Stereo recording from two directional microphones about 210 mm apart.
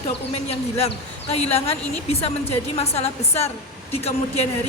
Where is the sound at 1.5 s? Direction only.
30° left (ahead or behind).